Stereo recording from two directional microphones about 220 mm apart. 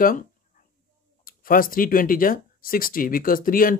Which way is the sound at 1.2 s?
40° left (ahead or behind).